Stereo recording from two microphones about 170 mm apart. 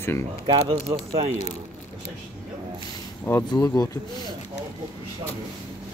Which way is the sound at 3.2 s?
15° left (ahead or behind).